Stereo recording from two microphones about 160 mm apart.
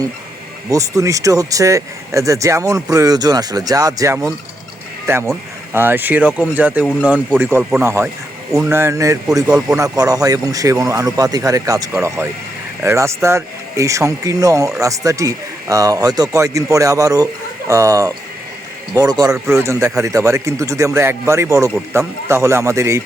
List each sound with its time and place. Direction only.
0.7 s speech: 20° right (ahead or behind)
9.5 s speech: 5° right (ahead or behind)
10.0 s speech: 20° right (ahead or behind)